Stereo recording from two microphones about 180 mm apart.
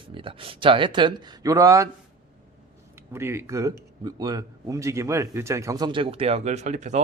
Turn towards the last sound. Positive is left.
turn(degrees=-40)  # may be behind; listen again after turning